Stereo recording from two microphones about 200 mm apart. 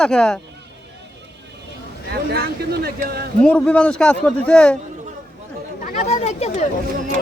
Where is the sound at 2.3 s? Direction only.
55° right (ahead or behind).